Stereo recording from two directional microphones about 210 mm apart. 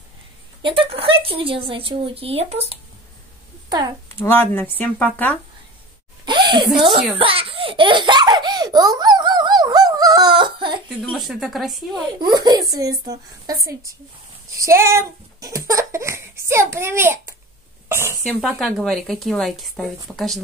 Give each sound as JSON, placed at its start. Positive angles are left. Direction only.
{"t": 0.6, "sound": "a woman's voice", "side_deg": -25}
{"t": 4.2, "sound": "speech", "side_deg": 10}
{"t": 6.2, "sound": "a sound", "side_deg": -20}
{"t": 6.7, "sound": "speech", "side_deg": 0}
{"t": 7.2, "sound": "baby laughter", "side_deg": -25}
{"t": 10.9, "sound": "speech", "side_deg": 0}
{"t": 11.9, "sound": "a woman's voice", "side_deg": -20}
{"t": 14.6, "sound": "speech", "side_deg": -15}
{"t": 18.2, "sound": "speech", "side_deg": 0}